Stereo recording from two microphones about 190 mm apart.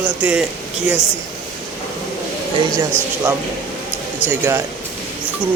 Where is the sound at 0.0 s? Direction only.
5° right (ahead or behind).